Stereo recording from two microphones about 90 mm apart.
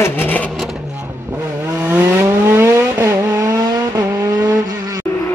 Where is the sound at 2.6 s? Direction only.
30° right (ahead or behind).